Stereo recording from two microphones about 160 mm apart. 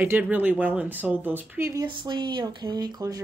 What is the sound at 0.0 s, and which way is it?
Speech, 10° right (ahead or behind).